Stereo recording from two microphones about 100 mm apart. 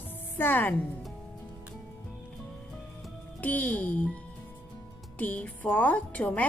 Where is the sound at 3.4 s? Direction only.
15° left (ahead or behind).